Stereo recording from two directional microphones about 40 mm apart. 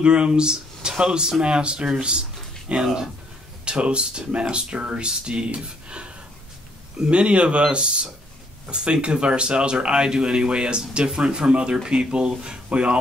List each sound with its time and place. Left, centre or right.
0.0 s speech: right